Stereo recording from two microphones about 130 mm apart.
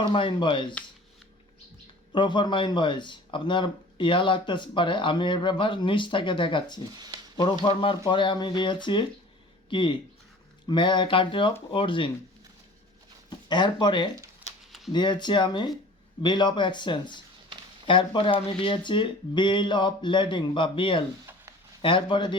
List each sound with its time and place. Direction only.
0.0 s speech: 40° left (ahead or behind)
2.1 s speech: 35° left (ahead or behind)
6.9 s speech: 30° right (ahead or behind)
7.6 s speech: 40° left (ahead or behind)
13.5 s speech: 35° left (ahead or behind)
14.7 s a sound: centre (ahead or behind)
14.9 s speech: 35° left (ahead or behind)